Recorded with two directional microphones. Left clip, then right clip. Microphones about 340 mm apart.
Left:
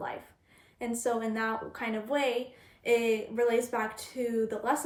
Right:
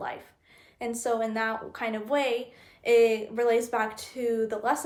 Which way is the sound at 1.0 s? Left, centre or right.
Centre.